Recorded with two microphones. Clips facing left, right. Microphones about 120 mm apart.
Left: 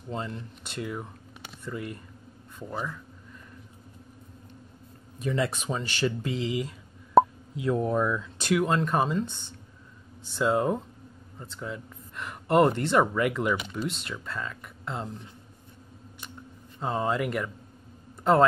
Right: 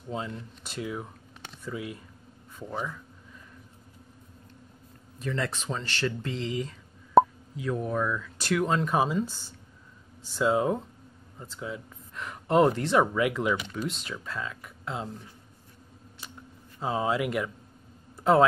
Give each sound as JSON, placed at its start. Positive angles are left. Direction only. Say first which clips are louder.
{"t": 0.1, "sound": "speech", "louder": "even", "side_deg": 0}
{"t": 5.2, "sound": "speech", "louder": "left 3 dB", "side_deg": 15}
{"t": 7.6, "sound": "speech", "louder": "left 3 dB", "side_deg": 20}
{"t": 8.6, "sound": "speech", "louder": "even", "side_deg": 0}
{"t": 16.2, "sound": "a sound", "louder": "left 1 dB", "side_deg": -5}
{"t": 16.8, "sound": "speech", "louder": "even", "side_deg": -5}
{"t": 18.1, "sound": "a sound", "louder": "even", "side_deg": 0}